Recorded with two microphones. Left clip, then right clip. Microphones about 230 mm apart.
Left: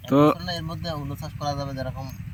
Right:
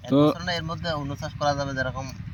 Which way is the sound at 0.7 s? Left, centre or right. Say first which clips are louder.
Right 3 dB; centre.